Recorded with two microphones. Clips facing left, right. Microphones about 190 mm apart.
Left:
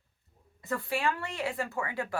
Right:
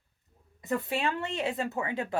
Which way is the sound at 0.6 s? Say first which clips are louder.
Right 2 dB; 20° right (ahead or behind).